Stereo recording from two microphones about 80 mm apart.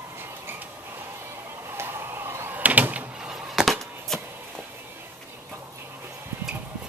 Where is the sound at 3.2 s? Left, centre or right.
Centre.